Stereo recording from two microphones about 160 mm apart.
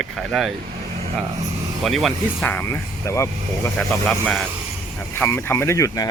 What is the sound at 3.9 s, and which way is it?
Speech, 10° left (ahead or behind).